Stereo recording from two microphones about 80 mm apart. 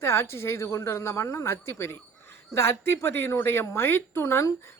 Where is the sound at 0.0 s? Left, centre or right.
Left.